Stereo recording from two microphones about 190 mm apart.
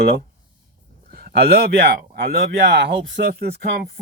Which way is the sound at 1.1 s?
50° right (ahead or behind).